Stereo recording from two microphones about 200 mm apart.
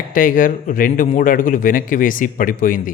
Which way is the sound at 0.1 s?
45° left (ahead or behind).